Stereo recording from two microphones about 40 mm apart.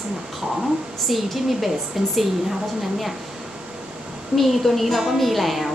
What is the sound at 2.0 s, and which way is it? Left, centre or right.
Speech, centre.